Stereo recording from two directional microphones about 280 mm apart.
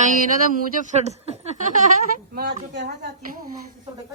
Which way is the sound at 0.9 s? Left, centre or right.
Right.